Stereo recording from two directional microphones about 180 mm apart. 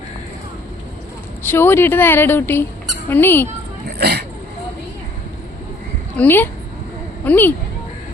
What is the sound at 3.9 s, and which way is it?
Speech, 60° right (ahead or behind).